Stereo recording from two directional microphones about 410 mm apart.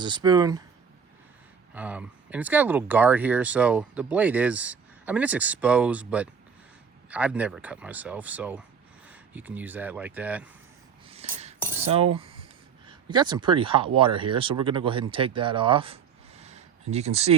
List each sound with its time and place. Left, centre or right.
0.0 s speech: centre
1.7 s speech: centre
11.1 s cutlery: centre
12.9 s speech: centre
16.4 s a sound: centre